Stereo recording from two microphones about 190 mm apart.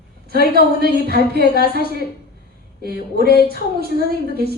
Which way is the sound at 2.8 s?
55° right (ahead or behind).